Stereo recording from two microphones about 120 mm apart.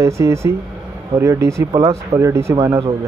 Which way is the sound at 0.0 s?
25° right (ahead or behind).